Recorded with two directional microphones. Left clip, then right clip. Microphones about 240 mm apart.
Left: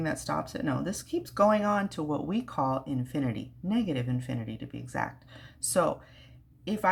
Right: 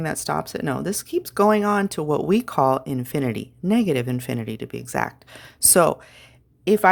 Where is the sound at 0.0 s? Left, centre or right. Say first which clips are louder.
Right 6 dB; right.